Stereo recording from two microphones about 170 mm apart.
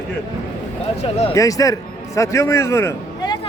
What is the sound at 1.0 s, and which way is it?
Speech, 35° left (ahead or behind).